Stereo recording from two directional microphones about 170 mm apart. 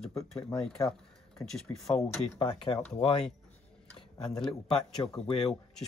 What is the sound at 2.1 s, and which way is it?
Speech, 20° left (ahead or behind).